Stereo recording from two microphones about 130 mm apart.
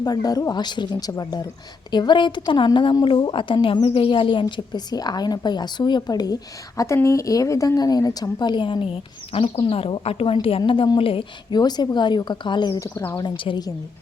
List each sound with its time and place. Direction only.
0.0 s a woman's voice: 30° left (ahead or behind)
12.9 s speech: 15° left (ahead or behind)
13.1 s speech: 40° left (ahead or behind)